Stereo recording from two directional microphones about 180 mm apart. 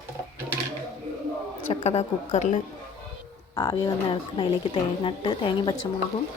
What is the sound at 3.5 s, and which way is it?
Speech, 20° left (ahead or behind).